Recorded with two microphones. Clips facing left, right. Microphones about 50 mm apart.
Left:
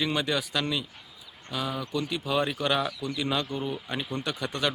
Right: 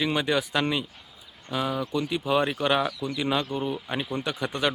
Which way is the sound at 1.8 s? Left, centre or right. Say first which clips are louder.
Right 3 dB; centre.